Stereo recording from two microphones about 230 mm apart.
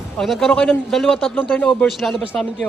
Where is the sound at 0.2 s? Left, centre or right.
Centre.